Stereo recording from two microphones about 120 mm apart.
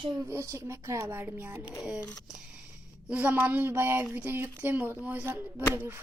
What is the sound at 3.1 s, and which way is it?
Speech, 15° right (ahead or behind).